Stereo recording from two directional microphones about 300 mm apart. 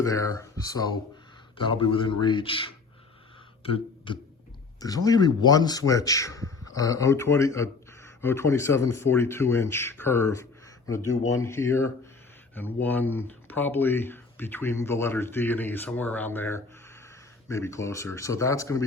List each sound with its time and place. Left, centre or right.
0.0 s a man's voice: centre
3.6 s beatboxing: centre
4.8 s a man's voice: centre